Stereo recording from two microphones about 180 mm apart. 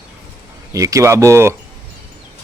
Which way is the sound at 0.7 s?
20° right (ahead or behind).